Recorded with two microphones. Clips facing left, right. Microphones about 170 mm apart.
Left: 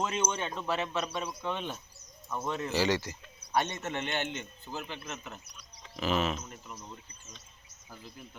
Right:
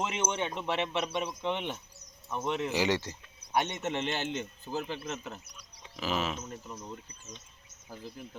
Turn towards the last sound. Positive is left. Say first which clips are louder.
# right 3 dB
turn(degrees=-35)  # may be behind; listen again after turning